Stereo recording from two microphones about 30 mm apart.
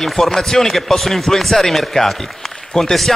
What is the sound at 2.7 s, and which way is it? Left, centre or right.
Speech, left.